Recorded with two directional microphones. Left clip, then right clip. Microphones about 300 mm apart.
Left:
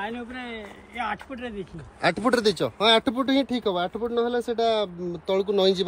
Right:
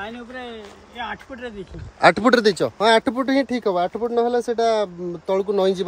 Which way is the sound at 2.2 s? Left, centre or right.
Right.